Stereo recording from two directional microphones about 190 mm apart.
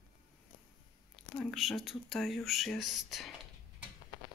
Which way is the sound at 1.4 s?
Centre (ahead or behind).